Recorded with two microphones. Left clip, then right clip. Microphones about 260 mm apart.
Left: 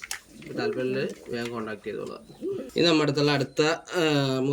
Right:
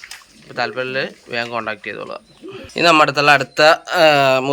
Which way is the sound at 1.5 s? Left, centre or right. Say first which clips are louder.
Right 10 dB; right.